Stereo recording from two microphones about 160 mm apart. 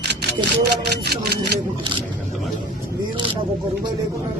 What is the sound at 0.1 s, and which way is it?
Speech, 90° right.